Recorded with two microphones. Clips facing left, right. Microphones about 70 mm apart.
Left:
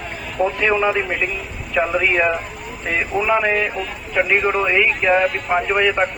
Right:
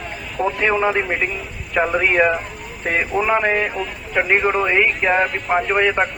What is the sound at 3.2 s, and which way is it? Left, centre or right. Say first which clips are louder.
Speech: left 1 dB; right.